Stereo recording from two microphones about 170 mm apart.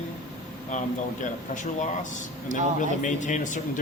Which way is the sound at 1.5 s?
45° left (ahead or behind).